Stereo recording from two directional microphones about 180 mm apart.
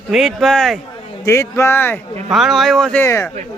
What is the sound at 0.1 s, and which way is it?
Speech, centre (ahead or behind).